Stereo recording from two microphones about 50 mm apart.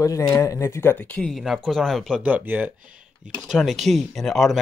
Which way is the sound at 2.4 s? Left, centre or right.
Right.